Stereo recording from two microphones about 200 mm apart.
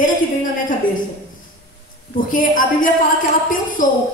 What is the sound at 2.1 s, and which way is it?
A woman's voice, 40° left (ahead or behind).